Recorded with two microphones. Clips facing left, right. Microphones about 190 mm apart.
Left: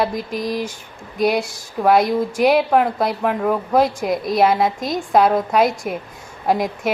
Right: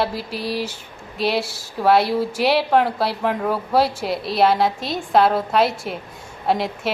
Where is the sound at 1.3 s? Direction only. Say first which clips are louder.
Left 2 dB; 5° right (ahead or behind).